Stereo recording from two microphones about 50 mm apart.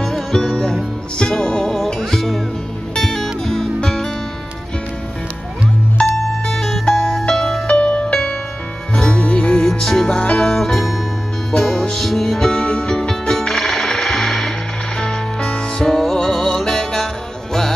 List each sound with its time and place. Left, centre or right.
0.0 s music: centre
6.0 s music: left
6.4 s music: centre
7.6 s music: left
9.7 s music: centre
10.0 s music: centre
10.5 s music: centre
15.0 s music: centre